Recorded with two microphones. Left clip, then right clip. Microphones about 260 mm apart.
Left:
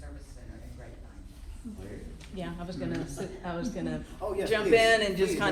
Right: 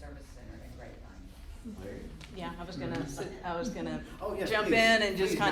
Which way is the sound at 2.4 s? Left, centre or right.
Right.